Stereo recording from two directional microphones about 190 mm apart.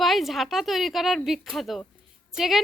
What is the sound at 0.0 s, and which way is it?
A woman's voice, centre (ahead or behind).